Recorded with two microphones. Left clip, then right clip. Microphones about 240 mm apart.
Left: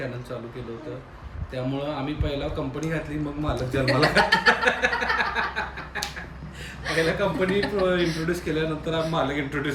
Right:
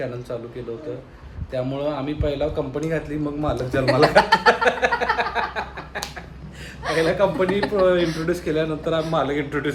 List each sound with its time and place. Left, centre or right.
0.0 s a man's voice: centre
1.5 s a man's voice: centre